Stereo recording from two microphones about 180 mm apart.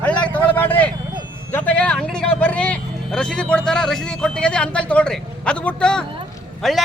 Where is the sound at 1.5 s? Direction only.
10° left (ahead or behind).